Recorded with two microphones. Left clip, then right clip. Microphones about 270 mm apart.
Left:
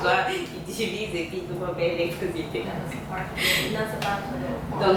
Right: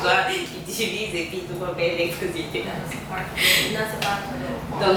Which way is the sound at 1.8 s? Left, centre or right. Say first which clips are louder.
Right 2 dB; centre.